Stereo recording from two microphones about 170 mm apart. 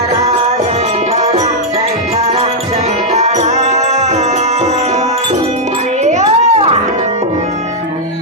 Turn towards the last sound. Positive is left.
turn(degrees=-40)  # may be behind; listen again after turning